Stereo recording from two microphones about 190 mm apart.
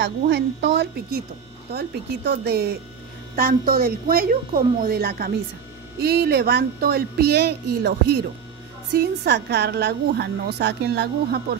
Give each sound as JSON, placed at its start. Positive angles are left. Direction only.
{"t": 0.0, "sound": "a woman's voice", "side_deg": -65}